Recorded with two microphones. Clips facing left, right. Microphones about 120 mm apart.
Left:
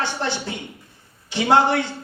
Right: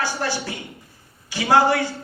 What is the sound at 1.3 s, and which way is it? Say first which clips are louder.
Speech: even; 20° left (ahead or behind).